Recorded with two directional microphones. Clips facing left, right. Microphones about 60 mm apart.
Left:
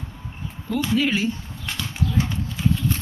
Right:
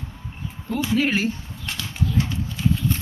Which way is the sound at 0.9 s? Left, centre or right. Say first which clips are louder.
Right 1 dB; right.